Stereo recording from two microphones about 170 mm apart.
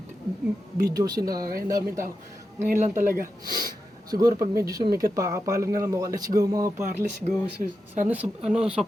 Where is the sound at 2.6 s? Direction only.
50° right (ahead or behind).